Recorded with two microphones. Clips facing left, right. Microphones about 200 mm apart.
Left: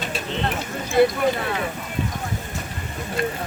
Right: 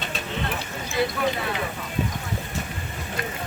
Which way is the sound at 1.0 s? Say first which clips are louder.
Left 8 dB; 55° left (ahead or behind).